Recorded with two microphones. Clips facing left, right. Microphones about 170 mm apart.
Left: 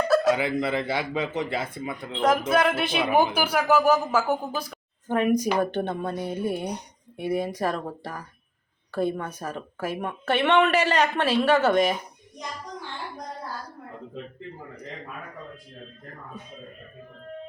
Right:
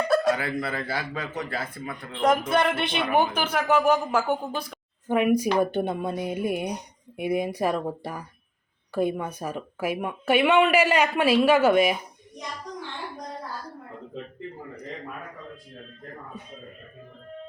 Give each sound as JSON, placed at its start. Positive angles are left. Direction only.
{"t": 0.3, "sound": "a man's voice", "side_deg": 20}
{"t": 2.5, "sound": "speech", "side_deg": 0}
{"t": 5.0, "sound": "speech", "side_deg": -10}